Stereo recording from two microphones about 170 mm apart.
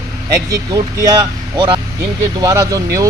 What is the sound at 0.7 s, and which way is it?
Speech, 20° right (ahead or behind).